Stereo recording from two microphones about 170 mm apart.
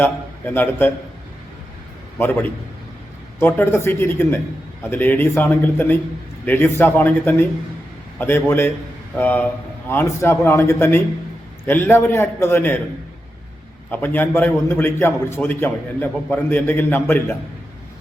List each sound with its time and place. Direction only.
0.0 s a man's voice: 10° left (ahead or behind)
2.1 s a man's voice: 10° left (ahead or behind)
13.9 s a man's voice: 10° left (ahead or behind)